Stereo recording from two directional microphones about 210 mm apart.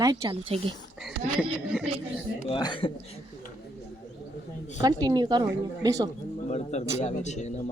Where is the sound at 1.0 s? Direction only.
Centre (ahead or behind).